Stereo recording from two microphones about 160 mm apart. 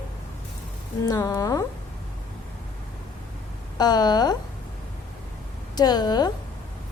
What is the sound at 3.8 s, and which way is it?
Speech, 25° left (ahead or behind).